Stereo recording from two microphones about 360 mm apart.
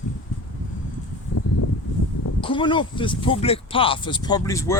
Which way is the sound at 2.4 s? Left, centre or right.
Centre.